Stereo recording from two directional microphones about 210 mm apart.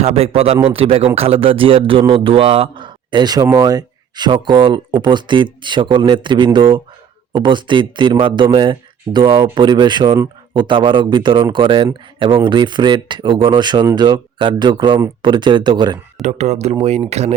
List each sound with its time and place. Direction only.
0.0 s speech: 30° right (ahead or behind)
16.2 s speech: 30° right (ahead or behind)